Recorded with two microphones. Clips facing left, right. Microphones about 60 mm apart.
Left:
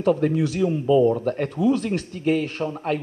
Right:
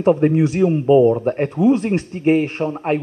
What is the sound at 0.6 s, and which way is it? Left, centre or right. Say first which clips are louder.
Speech: right 5 dB; right.